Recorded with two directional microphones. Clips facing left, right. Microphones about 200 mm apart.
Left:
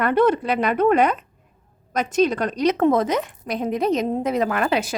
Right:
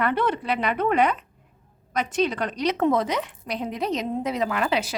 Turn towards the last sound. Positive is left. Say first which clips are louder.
# left 3 dB
turn(degrees=50)  # may be behind; listen again after turning